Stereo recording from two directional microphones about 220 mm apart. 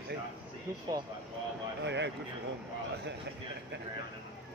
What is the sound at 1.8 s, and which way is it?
Speech, 55° right (ahead or behind).